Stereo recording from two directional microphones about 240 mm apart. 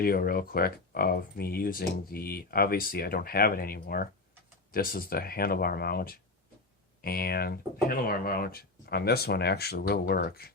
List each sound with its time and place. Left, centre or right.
0.0 s speech: left